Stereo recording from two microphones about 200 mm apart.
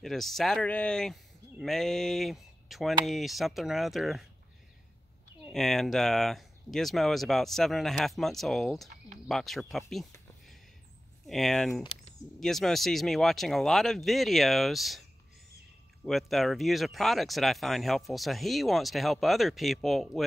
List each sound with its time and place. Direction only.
0.0 s speech: centre (ahead or behind)
5.5 s speech: centre (ahead or behind)
11.2 s speech: centre (ahead or behind)
11.8 s a sound: 30° left (ahead or behind)
12.4 s speech: centre (ahead or behind)